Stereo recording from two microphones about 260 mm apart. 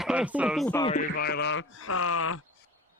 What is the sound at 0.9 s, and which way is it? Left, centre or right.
Speech, left.